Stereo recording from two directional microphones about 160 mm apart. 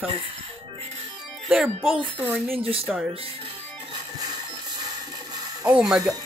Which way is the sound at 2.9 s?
Centre (ahead or behind).